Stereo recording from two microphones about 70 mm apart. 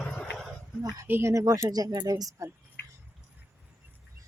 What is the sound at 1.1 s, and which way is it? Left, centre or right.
Speech, right.